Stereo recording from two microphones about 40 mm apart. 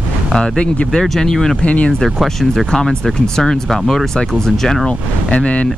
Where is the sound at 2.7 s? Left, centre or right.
Centre.